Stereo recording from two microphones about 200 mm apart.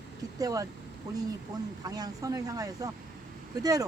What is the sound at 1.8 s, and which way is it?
Speech, 20° right (ahead or behind).